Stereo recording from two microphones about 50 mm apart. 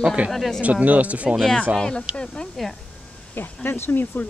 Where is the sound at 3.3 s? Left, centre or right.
Left.